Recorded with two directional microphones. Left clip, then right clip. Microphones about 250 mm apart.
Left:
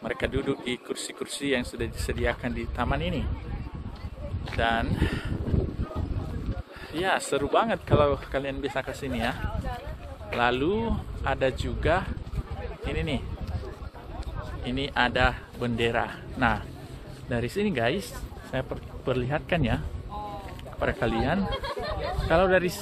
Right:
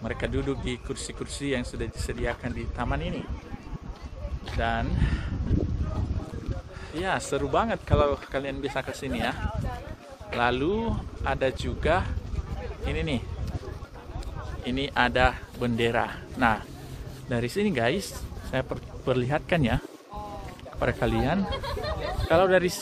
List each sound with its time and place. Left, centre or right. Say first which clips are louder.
0.0 s speech: left 2 dB; left
4.6 s speech: left 3 dB; left
6.9 s speech: left 2 dB; left; by 9.4 s centre
10.4 s speech: even; centre
14.6 s a man's voice: right 1 dB; right
20.8 s a man's voice: even; centre